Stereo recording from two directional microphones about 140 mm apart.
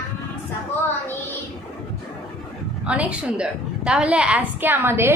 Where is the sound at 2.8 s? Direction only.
10° right (ahead or behind).